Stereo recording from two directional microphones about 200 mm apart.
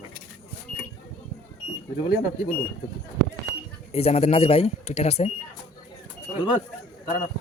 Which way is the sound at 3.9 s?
30° left (ahead or behind).